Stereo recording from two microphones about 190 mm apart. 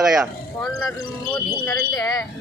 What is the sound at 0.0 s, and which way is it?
Speech, centre (ahead or behind).